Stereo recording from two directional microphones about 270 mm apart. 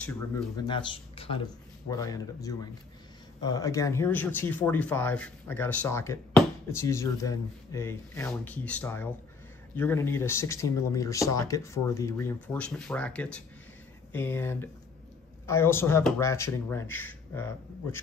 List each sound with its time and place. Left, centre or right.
0.6 s speech: centre